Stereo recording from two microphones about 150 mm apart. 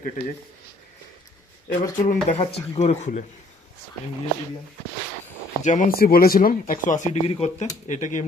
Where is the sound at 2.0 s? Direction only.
45° left (ahead or behind).